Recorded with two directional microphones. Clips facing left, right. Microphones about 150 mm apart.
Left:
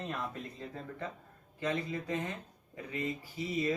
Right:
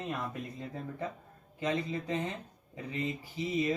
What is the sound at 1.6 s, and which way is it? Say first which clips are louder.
Speech: right 2 dB; 20° right (ahead or behind).